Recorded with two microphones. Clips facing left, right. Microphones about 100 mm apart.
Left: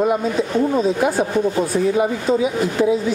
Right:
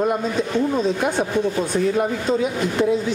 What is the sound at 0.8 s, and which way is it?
Speech, 5° left (ahead or behind).